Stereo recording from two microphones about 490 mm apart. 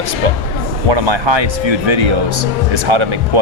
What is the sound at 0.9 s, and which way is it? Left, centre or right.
Speech, right.